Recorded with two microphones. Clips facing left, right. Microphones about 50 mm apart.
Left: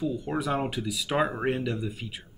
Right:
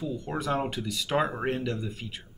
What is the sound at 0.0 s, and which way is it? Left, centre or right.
Speech, centre.